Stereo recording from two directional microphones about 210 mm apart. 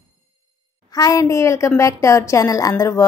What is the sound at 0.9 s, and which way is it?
A woman's voice, 15° left (ahead or behind).